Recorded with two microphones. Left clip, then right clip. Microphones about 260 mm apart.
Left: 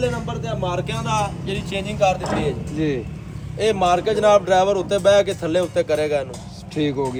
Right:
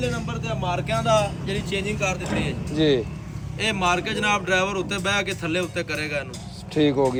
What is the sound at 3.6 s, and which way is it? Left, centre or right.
Speech, centre.